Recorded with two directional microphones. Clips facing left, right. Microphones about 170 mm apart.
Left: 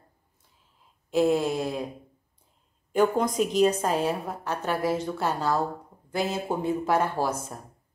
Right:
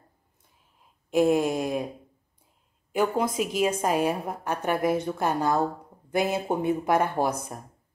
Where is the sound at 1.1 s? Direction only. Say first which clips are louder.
Right 1 dB; 15° right (ahead or behind).